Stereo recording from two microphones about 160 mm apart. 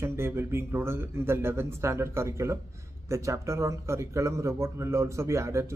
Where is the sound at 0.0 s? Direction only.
15° right (ahead or behind).